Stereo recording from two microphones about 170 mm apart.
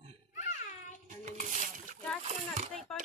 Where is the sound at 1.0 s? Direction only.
45° right (ahead or behind).